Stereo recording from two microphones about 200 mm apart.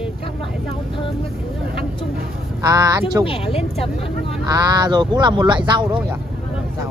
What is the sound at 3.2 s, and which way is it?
Speech, 30° left (ahead or behind).